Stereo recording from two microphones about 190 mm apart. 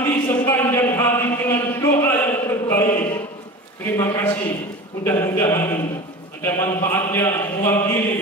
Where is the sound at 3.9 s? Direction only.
15° left (ahead or behind).